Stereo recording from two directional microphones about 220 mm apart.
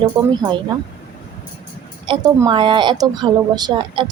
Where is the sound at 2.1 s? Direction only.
20° right (ahead or behind).